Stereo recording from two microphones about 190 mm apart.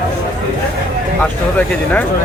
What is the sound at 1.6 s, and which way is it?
Speech, 10° left (ahead or behind).